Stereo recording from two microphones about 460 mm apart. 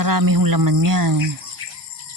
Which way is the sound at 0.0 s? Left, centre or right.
Right.